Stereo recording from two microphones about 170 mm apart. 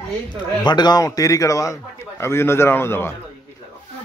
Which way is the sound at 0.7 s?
25° left (ahead or behind).